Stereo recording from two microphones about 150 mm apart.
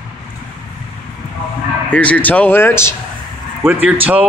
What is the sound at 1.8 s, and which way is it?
Speech, 10° left (ahead or behind).